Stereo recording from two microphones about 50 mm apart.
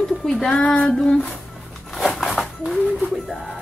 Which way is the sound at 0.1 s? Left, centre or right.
Centre.